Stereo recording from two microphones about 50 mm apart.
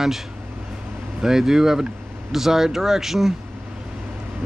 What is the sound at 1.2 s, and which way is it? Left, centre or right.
Speech, centre.